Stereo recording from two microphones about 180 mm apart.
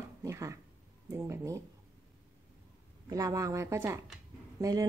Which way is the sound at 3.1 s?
20° right (ahead or behind).